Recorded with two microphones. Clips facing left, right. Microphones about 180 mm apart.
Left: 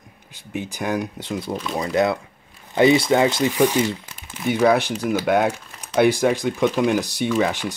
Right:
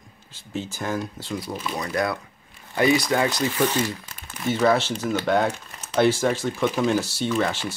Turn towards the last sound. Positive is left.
turn(degrees=15)  # may be behind; listen again after turning